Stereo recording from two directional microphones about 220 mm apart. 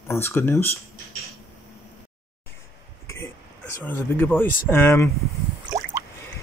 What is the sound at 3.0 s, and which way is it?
Throat clearing, 10° left (ahead or behind).